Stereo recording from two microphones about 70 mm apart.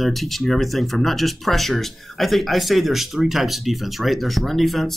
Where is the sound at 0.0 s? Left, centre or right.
Centre.